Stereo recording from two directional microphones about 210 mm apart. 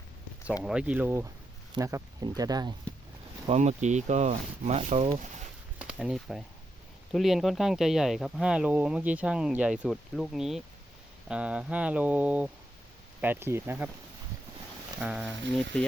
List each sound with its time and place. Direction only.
0.6 s speech: 5° right (ahead or behind)
3.4 s speech: 30° right (ahead or behind)
5.8 s a sound: 5° right (ahead or behind)
7.1 s speech: centre (ahead or behind)
15.0 s speech: 5° right (ahead or behind)
15.7 s speech: 5° left (ahead or behind)